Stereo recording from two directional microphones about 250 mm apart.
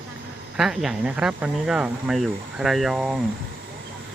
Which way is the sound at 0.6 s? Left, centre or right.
Centre.